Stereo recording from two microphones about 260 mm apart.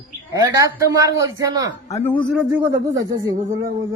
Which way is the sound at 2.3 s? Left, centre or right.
Centre.